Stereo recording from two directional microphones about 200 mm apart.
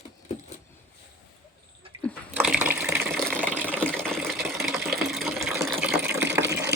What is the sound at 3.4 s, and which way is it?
Water, 10° right (ahead or behind).